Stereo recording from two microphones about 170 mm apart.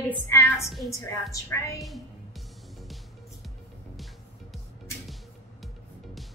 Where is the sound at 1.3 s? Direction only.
20° left (ahead or behind).